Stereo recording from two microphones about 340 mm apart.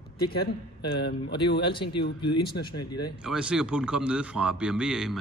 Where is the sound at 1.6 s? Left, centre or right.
Centre.